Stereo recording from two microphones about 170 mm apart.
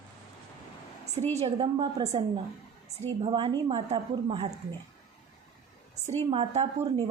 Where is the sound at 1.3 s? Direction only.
35° right (ahead or behind).